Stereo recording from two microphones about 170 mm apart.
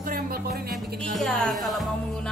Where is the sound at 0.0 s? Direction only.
60° right (ahead or behind).